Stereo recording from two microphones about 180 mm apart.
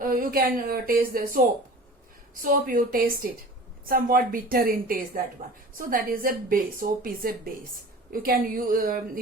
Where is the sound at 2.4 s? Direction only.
50° right (ahead or behind).